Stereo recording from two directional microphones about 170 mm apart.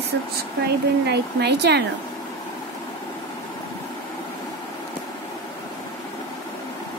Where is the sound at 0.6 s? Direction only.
75° right (ahead or behind).